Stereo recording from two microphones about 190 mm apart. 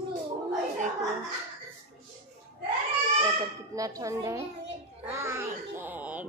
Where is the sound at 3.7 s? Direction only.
15° right (ahead or behind).